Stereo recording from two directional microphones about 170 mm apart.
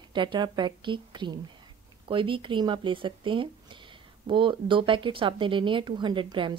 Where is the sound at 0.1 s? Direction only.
25° right (ahead or behind).